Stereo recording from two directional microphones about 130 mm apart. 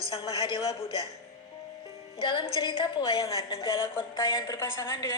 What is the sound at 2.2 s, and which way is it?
A woman's voice, 40° left (ahead or behind).